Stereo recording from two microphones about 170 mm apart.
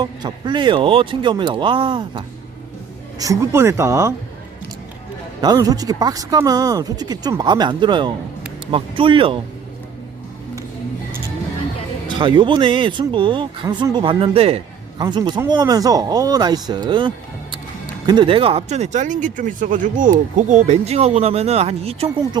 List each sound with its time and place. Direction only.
0.0 s speech: 25° right (ahead or behind)
3.2 s speech: 20° right (ahead or behind)
5.4 s speech: 20° right (ahead or behind)
12.0 s speech: 30° right (ahead or behind)